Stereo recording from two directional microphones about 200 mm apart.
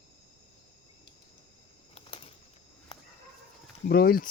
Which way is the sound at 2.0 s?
25° left (ahead or behind).